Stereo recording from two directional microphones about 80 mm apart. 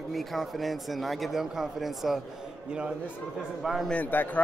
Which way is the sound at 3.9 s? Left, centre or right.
Centre.